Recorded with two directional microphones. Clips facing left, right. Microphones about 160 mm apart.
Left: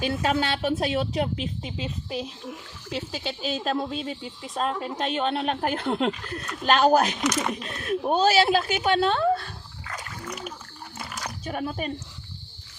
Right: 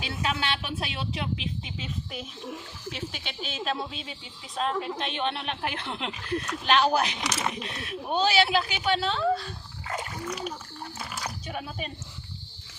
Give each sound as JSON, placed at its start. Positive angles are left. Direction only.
{"t": 0.0, "sound": "speech", "side_deg": 45}
{"t": 2.9, "sound": "speech", "side_deg": 40}
{"t": 9.8, "sound": "splash", "side_deg": -25}
{"t": 10.2, "sound": "a child's voice", "side_deg": 0}
{"t": 10.9, "sound": "a sound", "side_deg": 0}
{"t": 11.4, "sound": "speech", "side_deg": 50}